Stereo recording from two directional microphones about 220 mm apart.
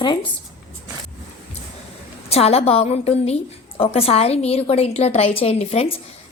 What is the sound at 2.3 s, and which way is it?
A woman's voice, 25° left (ahead or behind).